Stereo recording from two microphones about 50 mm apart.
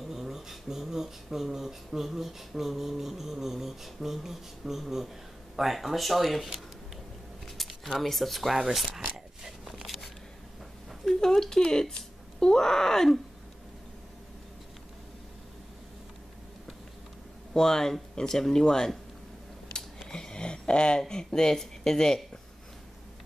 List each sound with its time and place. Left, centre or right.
0.1 s a sound: centre
8.9 s biting: centre
11.1 s speech: centre
17.6 s speech: centre
20.1 s a sound: centre
21.0 s speech: centre